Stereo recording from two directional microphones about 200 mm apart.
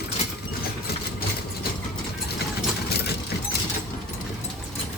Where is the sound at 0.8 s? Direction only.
50° left (ahead or behind).